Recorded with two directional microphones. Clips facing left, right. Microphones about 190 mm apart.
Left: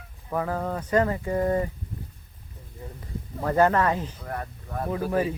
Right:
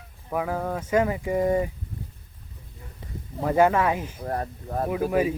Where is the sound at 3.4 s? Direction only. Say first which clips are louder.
Right 1 dB; 10° right (ahead or behind).